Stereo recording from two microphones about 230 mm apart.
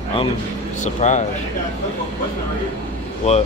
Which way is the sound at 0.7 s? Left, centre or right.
Left.